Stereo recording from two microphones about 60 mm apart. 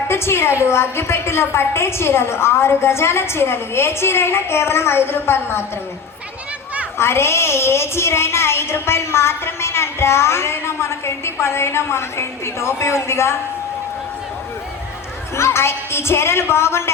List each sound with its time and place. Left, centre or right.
0.1 s a woman's voice: left
7.0 s a woman's voice: left
15.4 s a woman's voice: left